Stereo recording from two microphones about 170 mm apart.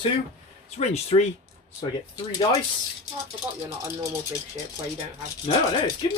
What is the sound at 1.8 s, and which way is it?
Speech, 25° left (ahead or behind).